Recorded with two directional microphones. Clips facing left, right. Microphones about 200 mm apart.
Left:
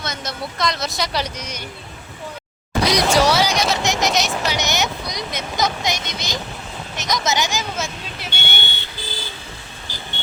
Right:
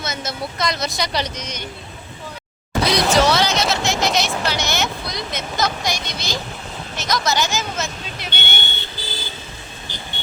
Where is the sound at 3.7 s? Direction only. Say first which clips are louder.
Even; 15° left (ahead or behind).